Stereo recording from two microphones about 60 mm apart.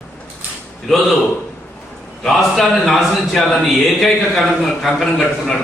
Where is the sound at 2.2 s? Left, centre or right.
Centre.